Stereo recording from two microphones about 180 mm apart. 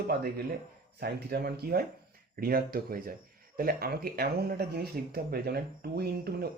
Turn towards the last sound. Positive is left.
turn(degrees=-60)  # may be behind; listen again after turning